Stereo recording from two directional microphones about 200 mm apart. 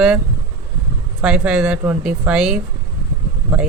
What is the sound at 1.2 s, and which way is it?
Speech, 5° right (ahead or behind).